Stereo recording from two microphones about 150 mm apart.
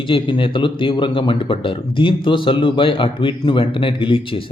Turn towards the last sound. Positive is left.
turn(degrees=35)  # may be behind; listen again after turning